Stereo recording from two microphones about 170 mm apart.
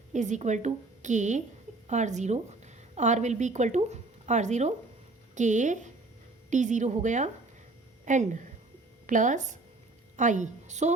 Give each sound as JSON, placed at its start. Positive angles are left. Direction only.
{"t": 0.1, "sound": "a woman's voice", "side_deg": -45}